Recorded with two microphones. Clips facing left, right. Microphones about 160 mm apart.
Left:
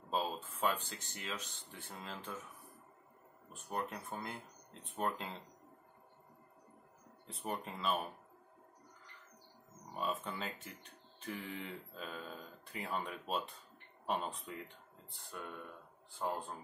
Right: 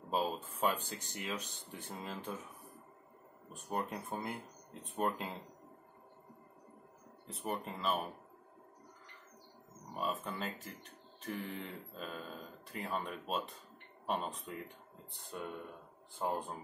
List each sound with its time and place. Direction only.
0.1 s speech: 15° right (ahead or behind)
3.5 s speech: 15° right (ahead or behind)
7.2 s speech: centre (ahead or behind)
9.9 s speech: centre (ahead or behind)
15.1 s speech: 20° right (ahead or behind)